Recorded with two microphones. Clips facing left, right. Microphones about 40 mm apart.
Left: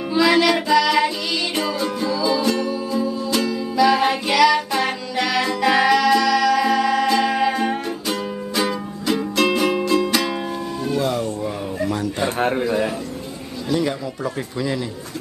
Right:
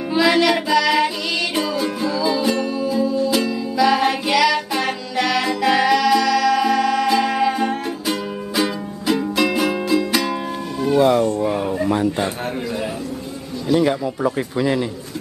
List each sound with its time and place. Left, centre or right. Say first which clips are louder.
0.1 s music: even; centre
10.9 s a sound: right 7 dB; right
13.7 s a man's voice: right 4 dB; centre